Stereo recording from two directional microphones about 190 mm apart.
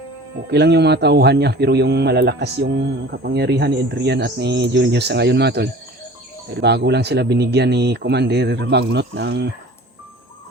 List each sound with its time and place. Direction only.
0.5 s a man's voice: 60° right (ahead or behind)